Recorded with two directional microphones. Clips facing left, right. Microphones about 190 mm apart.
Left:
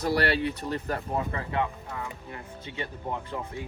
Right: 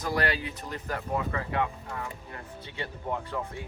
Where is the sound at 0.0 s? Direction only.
35° left (ahead or behind).